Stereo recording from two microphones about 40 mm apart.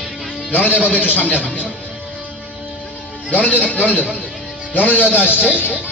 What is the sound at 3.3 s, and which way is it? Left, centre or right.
Speech, left.